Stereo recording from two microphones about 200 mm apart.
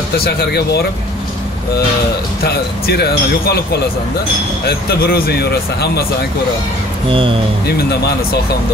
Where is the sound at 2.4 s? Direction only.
55° left (ahead or behind).